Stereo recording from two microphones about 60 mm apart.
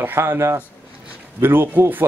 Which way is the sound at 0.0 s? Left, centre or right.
Right.